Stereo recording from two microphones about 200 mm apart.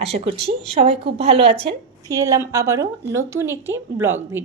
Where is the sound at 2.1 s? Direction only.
15° right (ahead or behind).